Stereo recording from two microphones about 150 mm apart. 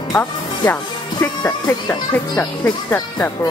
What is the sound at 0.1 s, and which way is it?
Speech, 10° left (ahead or behind).